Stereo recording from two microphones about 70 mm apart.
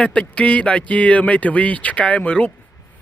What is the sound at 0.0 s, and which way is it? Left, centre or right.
Speech, centre.